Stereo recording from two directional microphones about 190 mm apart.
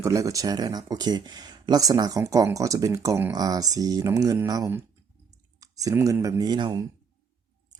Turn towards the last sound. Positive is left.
turn(degrees=-20)  # may be behind; listen again after turning